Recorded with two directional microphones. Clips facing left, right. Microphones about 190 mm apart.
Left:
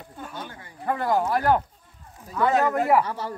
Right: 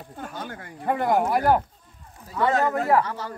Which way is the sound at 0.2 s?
45° right (ahead or behind).